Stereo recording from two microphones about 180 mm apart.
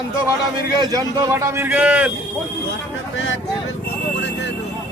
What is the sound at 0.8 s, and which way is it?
A man's voice, 20° right (ahead or behind).